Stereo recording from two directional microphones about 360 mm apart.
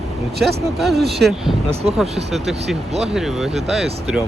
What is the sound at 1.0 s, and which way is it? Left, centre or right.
Speech, right.